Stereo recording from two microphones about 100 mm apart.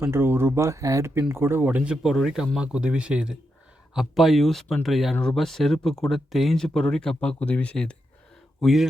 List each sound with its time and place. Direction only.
0.0 s speech: 25° right (ahead or behind); by 7.9 s 10° left (ahead or behind)
8.6 s speech: centre (ahead or behind)